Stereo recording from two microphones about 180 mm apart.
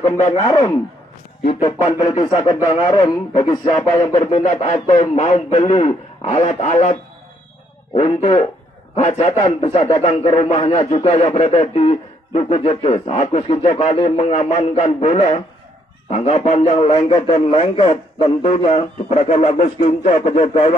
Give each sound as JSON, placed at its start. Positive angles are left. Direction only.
{"t": 0.5, "sound": "speech", "side_deg": 20}
{"t": 1.9, "sound": "speech", "side_deg": 25}
{"t": 4.2, "sound": "a man's voice", "side_deg": 35}